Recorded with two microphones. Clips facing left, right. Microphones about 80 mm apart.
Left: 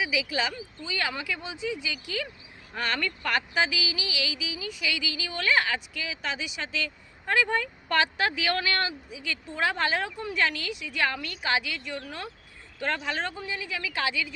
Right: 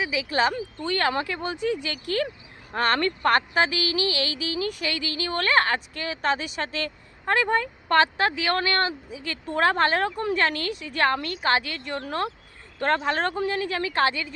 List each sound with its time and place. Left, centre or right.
0.3 s a woman's voice: right
4.8 s a woman's voice: right
12.0 s speech: right
13.1 s a woman's voice: right
13.3 s a woman's voice: right